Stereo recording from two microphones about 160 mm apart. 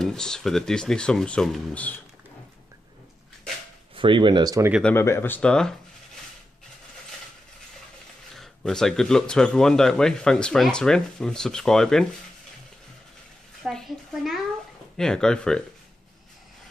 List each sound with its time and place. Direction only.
0.0 s speech: 5° left (ahead or behind)
3.9 s speech: 30° right (ahead or behind)
4.8 s speech: 15° left (ahead or behind)
8.4 s speech: centre (ahead or behind)
13.7 s a woman's voice: centre (ahead or behind)